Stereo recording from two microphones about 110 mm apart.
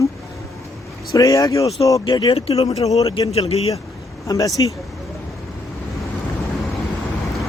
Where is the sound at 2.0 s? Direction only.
45° left (ahead or behind).